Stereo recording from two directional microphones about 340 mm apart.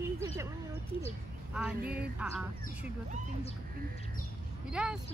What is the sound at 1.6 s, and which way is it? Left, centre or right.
Speech, centre.